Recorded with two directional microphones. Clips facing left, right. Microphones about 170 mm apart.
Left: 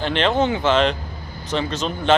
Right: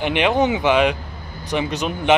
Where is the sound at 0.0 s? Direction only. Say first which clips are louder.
Right 1 dB; 15° right (ahead or behind).